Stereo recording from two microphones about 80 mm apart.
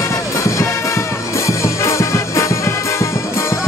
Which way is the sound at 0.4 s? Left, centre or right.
Left.